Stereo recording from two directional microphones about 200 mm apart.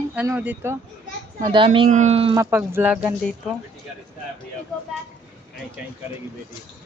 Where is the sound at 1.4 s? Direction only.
25° right (ahead or behind).